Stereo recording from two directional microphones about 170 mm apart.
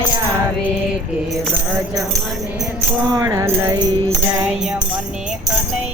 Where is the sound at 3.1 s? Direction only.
20° right (ahead or behind).